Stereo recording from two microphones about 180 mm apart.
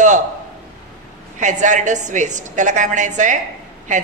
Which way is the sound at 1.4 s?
45° right (ahead or behind).